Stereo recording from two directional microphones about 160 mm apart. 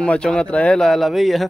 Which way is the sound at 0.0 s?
5° left (ahead or behind).